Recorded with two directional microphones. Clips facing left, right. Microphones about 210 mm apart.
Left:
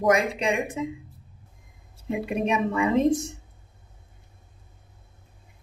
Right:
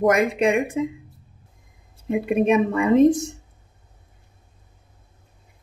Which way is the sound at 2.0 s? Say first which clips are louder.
Right 7 dB; 55° right (ahead or behind).